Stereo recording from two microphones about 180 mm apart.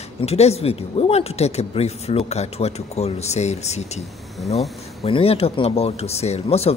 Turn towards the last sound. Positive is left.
turn(degrees=35)  # may be behind; listen again after turning